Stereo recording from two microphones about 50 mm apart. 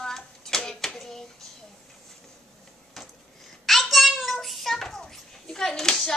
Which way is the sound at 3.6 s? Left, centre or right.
Centre.